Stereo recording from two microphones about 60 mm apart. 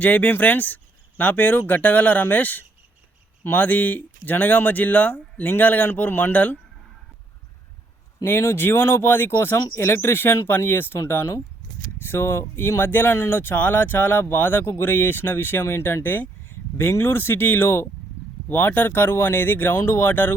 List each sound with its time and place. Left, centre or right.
0.0 s speech: left
8.2 s speech: left